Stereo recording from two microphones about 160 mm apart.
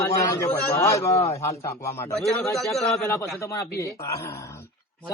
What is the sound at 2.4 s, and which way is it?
Speech, centre (ahead or behind).